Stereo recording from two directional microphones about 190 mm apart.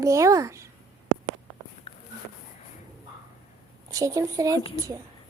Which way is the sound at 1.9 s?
35° left (ahead or behind).